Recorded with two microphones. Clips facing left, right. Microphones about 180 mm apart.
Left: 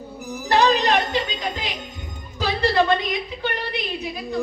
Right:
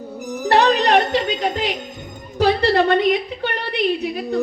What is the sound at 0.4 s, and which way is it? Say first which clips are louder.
Music: right 3 dB; 65° right (ahead or behind).